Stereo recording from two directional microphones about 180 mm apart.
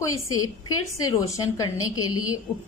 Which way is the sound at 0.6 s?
20° left (ahead or behind).